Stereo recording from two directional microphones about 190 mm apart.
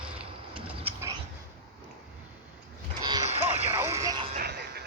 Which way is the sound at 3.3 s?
35° right (ahead or behind).